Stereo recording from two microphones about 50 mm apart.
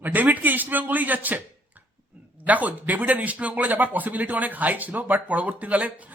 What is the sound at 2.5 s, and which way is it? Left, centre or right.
A man's voice, right.